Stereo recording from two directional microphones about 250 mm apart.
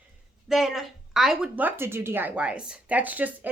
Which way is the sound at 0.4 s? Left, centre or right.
Centre.